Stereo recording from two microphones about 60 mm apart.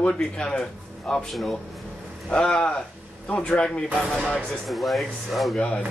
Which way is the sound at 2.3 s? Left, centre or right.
Centre.